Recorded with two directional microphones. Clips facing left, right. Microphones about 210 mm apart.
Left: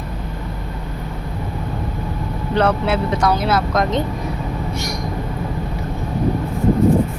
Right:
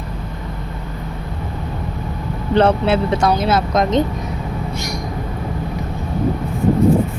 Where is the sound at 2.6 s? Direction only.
25° right (ahead or behind).